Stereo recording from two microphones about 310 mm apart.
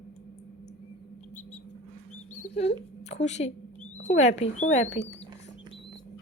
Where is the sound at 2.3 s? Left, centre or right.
Left.